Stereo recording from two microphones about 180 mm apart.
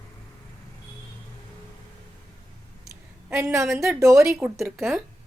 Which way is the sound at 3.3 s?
15° right (ahead or behind).